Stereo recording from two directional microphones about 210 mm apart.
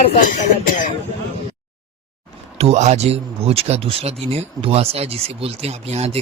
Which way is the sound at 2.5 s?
30° right (ahead or behind).